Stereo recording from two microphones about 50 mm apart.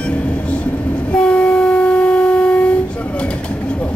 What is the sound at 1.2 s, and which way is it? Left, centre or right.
Train, left.